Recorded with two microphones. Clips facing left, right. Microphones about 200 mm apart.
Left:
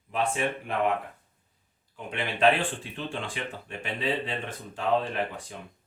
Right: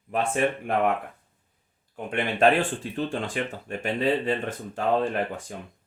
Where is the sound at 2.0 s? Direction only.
50° right (ahead or behind).